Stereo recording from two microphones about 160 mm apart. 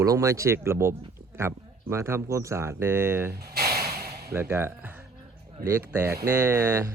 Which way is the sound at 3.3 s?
80° right.